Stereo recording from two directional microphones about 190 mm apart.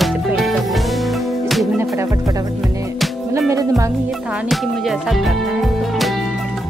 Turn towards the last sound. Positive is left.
turn(degrees=0)  # may be behind; listen again after turning